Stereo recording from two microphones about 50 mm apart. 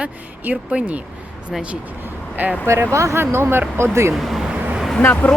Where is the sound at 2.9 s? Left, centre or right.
Right.